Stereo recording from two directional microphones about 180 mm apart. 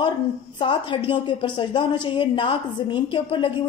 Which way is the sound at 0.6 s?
30° left (ahead or behind).